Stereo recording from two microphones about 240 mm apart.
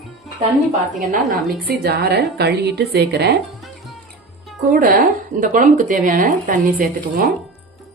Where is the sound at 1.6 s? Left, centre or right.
Right.